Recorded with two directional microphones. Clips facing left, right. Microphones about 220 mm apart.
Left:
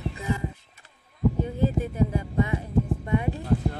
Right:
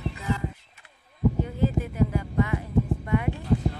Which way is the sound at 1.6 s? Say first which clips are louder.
Even; 20° left (ahead or behind).